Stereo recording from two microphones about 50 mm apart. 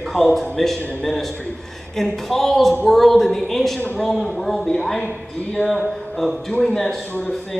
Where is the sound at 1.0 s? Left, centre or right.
Centre.